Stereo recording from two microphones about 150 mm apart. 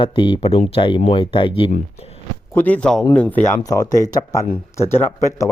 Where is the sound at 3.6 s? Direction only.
20° left (ahead or behind).